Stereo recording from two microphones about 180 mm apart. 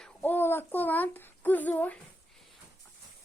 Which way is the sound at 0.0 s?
10° left (ahead or behind).